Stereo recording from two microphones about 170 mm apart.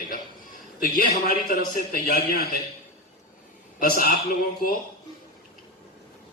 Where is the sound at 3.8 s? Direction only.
55° left (ahead or behind).